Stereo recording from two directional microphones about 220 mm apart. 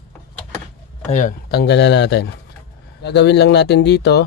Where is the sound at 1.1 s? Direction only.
40° left (ahead or behind).